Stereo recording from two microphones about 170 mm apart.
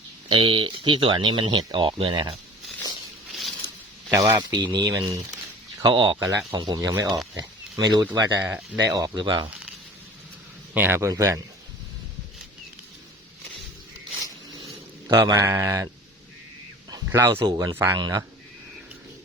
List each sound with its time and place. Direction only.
0.3 s speech: 30° right (ahead or behind)
4.1 s speech: 20° right (ahead or behind)
8.9 s speech: 20° right (ahead or behind)
10.8 s speech: 15° right (ahead or behind)
15.1 s speech: 20° right (ahead or behind)
16.9 s speech: 20° right (ahead or behind)